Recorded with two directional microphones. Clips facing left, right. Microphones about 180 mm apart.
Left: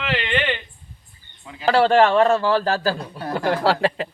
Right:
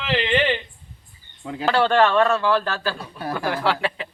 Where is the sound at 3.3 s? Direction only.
40° left (ahead or behind).